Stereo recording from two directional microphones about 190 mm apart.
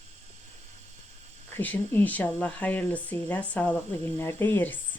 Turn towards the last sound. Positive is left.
turn(degrees=10)  # may be behind; listen again after turning